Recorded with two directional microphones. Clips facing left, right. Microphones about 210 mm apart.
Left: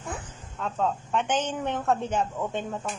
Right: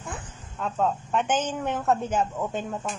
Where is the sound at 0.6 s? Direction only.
5° right (ahead or behind).